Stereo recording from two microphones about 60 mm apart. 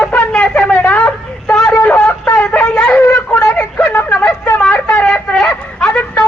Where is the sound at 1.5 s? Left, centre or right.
Centre.